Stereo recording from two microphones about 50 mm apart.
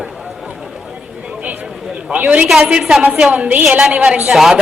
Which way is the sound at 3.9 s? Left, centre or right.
Centre.